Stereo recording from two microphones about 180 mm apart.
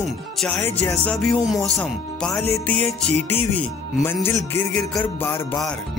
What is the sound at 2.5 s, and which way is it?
Speech, 10° left (ahead or behind).